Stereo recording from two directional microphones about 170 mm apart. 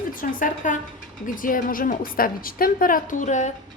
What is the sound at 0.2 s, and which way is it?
A woman's voice, 50° left (ahead or behind).